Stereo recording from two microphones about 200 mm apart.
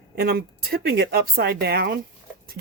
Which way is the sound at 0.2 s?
50° right (ahead or behind).